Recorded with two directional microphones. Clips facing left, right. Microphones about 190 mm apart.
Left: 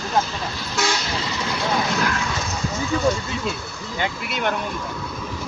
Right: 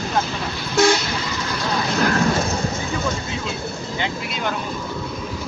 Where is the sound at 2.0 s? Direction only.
40° right (ahead or behind).